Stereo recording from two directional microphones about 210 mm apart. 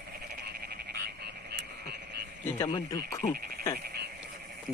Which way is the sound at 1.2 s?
50° right (ahead or behind).